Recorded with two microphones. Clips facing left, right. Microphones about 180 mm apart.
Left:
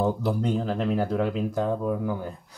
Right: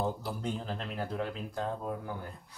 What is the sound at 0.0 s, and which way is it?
Speech, 80° left.